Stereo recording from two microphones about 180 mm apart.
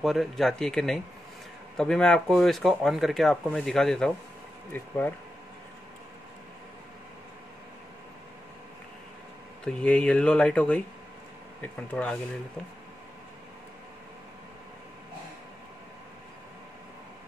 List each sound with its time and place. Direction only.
0.0 s speech: centre (ahead or behind)
9.7 s speech: 5° left (ahead or behind)